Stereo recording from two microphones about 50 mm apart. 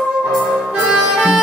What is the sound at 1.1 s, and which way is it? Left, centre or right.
Music, centre.